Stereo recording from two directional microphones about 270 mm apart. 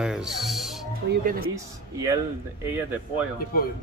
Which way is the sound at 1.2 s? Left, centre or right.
Right.